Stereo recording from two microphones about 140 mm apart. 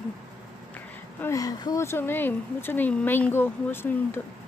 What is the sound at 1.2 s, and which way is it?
Speech, 25° left (ahead or behind).